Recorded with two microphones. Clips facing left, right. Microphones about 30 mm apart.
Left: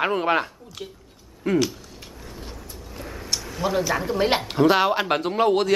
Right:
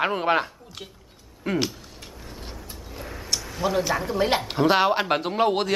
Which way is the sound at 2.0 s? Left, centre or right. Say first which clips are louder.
Left 1 dB; centre.